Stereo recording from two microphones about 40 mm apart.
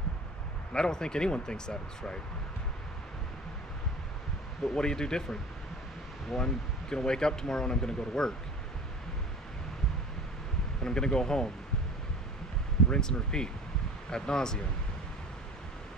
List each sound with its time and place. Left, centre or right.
0.7 s speech: centre
4.7 s speech: centre
6.3 s speech: centre
10.8 s speech: centre
12.9 s speech: centre